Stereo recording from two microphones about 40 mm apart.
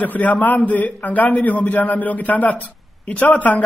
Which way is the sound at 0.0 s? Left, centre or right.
Left.